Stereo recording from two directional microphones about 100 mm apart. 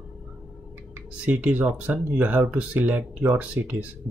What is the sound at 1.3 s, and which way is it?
Speech, 15° right (ahead or behind).